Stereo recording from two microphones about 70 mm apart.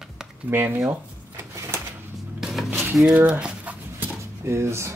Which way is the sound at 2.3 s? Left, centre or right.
Centre.